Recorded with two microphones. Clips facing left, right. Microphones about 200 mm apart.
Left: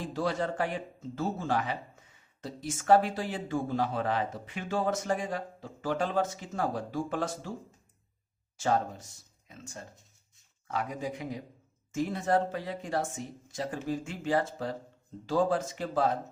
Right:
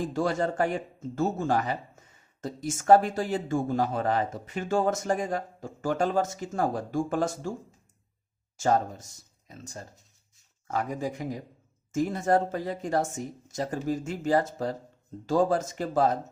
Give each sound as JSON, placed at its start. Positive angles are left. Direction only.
{"t": 0.0, "sound": "speech", "side_deg": -45}
{"t": 8.5, "sound": "speech", "side_deg": -45}